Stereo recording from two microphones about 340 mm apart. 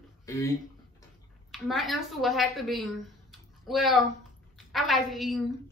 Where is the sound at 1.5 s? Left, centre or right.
Centre.